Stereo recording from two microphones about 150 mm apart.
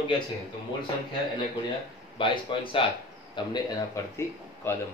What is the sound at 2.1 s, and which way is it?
A man's voice, 35° left (ahead or behind).